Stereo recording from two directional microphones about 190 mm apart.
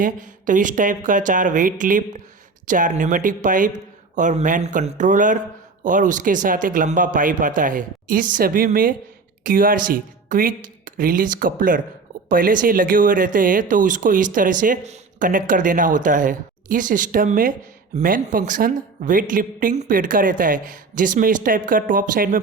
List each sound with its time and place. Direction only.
0.0 s speech: 45° right (ahead or behind)